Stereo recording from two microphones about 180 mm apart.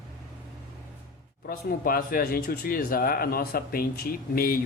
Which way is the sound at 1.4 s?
55° left (ahead or behind).